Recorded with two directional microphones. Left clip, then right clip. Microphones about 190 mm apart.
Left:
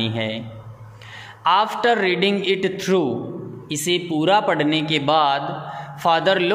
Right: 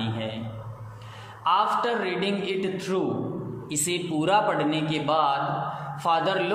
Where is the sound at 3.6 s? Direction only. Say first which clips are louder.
Left 7 dB; 35° left (ahead or behind).